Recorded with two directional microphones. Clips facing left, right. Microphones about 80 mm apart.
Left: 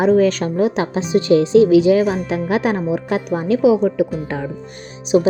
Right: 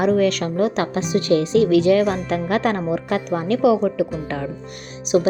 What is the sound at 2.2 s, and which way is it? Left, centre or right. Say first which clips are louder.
A woman's voice: left 2 dB; centre.